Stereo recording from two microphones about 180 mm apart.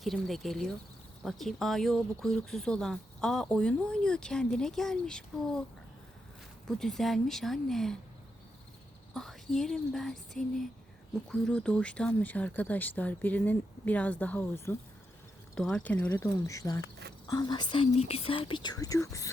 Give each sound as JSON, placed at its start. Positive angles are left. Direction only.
{"t": 0.0, "sound": "speech", "side_deg": 0}
{"t": 6.7, "sound": "speech", "side_deg": 5}
{"t": 9.1, "sound": "speech", "side_deg": 0}